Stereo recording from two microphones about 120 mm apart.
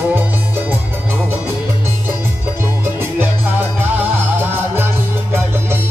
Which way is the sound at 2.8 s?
20° right (ahead or behind).